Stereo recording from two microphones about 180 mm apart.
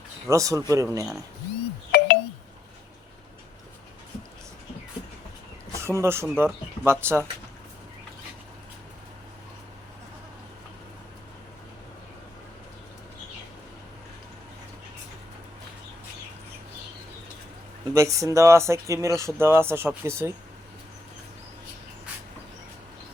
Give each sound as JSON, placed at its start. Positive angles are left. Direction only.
{"t": 0.3, "sound": "speech", "side_deg": -15}
{"t": 1.9, "sound": "a sound", "side_deg": 65}
{"t": 5.8, "sound": "speech", "side_deg": -15}
{"t": 17.9, "sound": "speech", "side_deg": -15}